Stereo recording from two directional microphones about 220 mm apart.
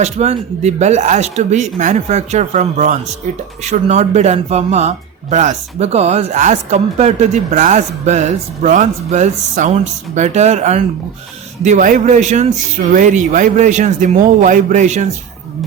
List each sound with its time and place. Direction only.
0.0 s speech: 30° right (ahead or behind)